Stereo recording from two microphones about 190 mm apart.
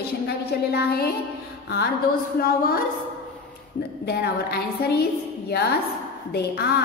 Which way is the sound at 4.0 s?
55° left (ahead or behind).